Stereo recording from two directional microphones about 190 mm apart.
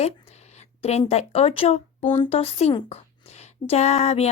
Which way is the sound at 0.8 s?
35° left (ahead or behind).